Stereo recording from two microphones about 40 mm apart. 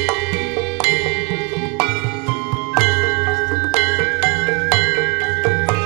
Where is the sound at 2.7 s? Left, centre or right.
Centre.